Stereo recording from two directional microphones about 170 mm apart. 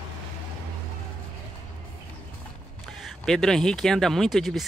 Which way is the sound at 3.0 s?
Centre (ahead or behind).